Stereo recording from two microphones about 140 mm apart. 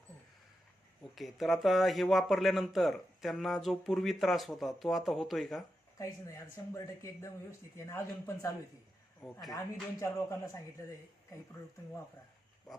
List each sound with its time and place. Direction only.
1.1 s speech: centre (ahead or behind)
6.0 s speech: 20° left (ahead or behind)
9.5 s speech: 20° left (ahead or behind)